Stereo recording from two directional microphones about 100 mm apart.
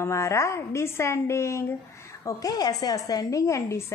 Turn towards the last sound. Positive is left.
turn(degrees=30)  # may be behind; listen again after turning